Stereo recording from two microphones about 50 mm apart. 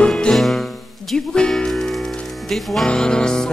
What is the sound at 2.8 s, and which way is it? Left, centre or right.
Music, centre.